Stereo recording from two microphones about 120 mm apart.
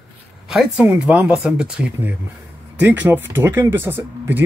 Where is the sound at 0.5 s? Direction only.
5° right (ahead or behind).